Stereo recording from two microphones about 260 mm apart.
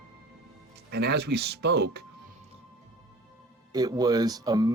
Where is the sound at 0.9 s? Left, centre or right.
Right.